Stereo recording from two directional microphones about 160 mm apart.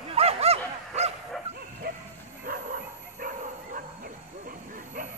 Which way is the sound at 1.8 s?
70° right (ahead or behind).